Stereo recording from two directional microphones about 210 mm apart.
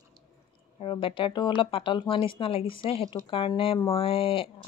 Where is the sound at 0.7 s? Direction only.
25° left (ahead or behind).